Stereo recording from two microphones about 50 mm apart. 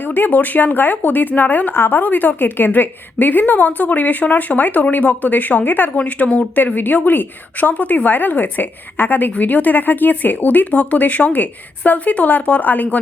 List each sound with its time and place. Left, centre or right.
0.0 s speech: left